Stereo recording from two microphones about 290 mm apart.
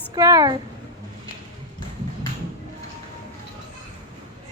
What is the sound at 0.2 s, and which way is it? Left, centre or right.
Speech, centre.